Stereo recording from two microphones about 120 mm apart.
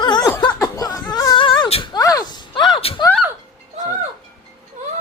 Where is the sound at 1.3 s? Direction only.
40° left (ahead or behind).